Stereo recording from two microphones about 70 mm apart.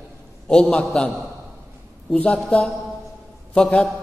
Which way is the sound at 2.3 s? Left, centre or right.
Centre.